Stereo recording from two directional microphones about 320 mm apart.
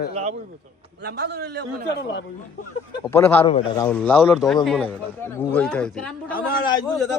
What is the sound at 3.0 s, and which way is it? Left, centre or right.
Speech, centre.